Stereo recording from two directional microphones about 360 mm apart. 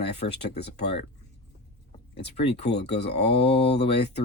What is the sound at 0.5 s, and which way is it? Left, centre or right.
Speech, left.